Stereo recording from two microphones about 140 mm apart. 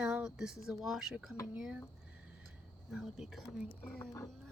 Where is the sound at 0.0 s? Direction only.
10° right (ahead or behind).